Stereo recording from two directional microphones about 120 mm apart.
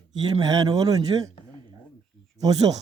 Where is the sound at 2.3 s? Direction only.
30° right (ahead or behind).